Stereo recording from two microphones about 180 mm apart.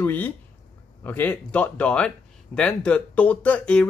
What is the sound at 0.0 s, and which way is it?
Speech, 10° left (ahead or behind).